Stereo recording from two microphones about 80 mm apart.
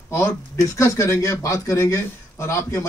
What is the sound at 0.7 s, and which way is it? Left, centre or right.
A man's voice, left.